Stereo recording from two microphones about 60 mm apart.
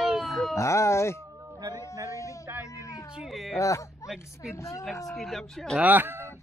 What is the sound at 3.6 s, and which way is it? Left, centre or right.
A woman's voice, left.